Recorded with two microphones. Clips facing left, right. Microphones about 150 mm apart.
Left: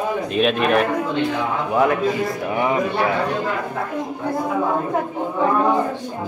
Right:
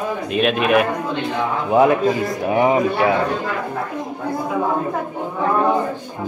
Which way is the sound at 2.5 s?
25° right (ahead or behind).